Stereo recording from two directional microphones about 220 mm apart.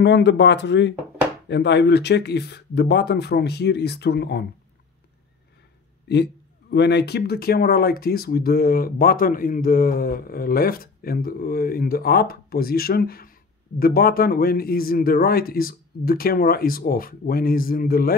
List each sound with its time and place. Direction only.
0.0 s speech: 50° left (ahead or behind)
6.0 s speech: 50° left (ahead or behind)